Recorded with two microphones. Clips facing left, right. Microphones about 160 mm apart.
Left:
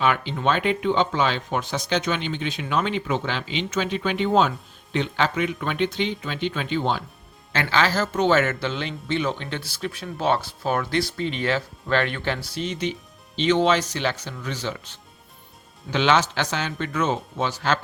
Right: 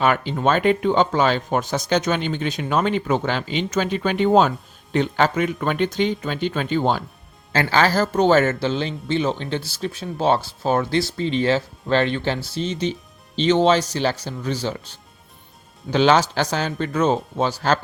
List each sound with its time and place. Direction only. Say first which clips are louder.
0.0 s speech: right 3 dB; 45° right (ahead or behind)